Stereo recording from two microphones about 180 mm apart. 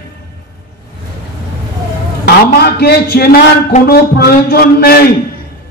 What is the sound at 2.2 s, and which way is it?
A man's voice, 60° left (ahead or behind).